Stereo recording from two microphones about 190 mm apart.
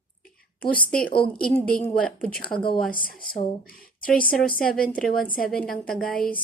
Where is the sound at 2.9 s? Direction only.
50° left (ahead or behind).